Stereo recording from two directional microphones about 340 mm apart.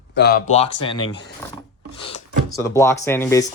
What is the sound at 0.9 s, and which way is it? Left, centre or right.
Speech, left.